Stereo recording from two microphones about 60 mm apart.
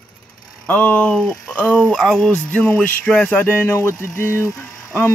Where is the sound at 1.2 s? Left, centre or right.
Centre.